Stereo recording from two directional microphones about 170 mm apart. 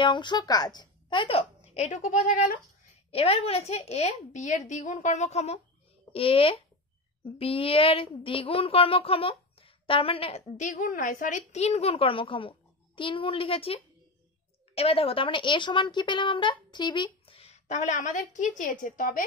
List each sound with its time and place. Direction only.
0.0 s a woman's voice: 25° left (ahead or behind); by 2.5 s 50° left (ahead or behind)
3.1 s a woman's voice: 35° left (ahead or behind)
14.8 s a woman's voice: 35° left (ahead or behind); by 19.2 s 55° left (ahead or behind)